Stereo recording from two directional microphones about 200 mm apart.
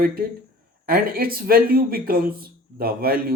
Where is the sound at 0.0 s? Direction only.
45° right (ahead or behind).